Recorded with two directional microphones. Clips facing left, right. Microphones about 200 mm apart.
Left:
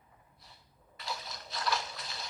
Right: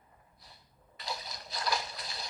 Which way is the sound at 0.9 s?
Centre (ahead or behind).